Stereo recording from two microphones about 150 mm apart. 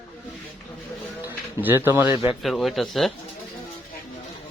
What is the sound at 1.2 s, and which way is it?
A man's voice, 15° right (ahead or behind).